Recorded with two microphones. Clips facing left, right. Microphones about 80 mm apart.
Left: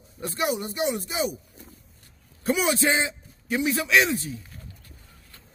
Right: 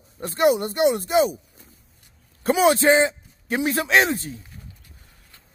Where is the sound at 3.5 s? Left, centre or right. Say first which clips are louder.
Right 2 dB; right.